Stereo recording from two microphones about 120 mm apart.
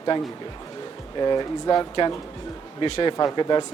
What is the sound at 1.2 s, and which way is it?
Speech, 35° left (ahead or behind).